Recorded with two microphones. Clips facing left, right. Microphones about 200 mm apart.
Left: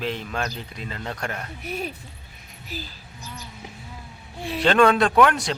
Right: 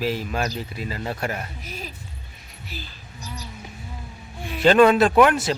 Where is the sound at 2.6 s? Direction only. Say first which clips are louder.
Left 3 dB; 40° left (ahead or behind).